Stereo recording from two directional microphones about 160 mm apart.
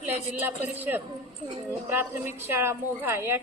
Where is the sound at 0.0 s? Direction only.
10° right (ahead or behind).